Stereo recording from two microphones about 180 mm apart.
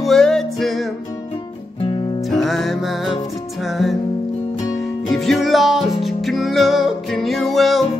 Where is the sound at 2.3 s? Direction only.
Centre (ahead or behind).